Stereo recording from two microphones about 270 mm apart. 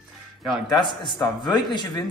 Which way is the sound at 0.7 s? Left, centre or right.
Centre.